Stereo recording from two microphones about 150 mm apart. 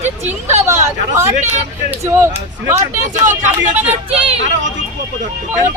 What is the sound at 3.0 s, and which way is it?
Speech, 55° right (ahead or behind).